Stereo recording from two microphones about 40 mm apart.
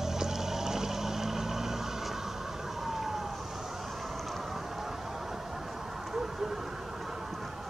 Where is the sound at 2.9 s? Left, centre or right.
Centre.